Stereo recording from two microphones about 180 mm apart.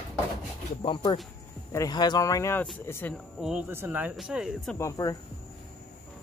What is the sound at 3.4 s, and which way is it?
Speech, centre (ahead or behind).